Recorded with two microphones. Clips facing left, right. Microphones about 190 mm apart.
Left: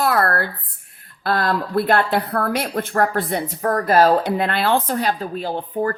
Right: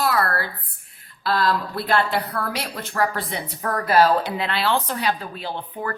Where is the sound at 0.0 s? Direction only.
55° left (ahead or behind).